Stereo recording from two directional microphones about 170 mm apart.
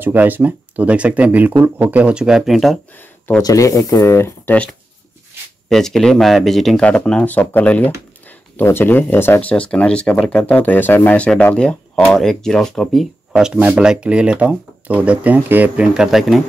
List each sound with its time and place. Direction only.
0.0 s speech: 10° right (ahead or behind)
3.0 s a sound: 10° left (ahead or behind)
3.4 s speech: 20° left (ahead or behind)
5.7 s speech: centre (ahead or behind)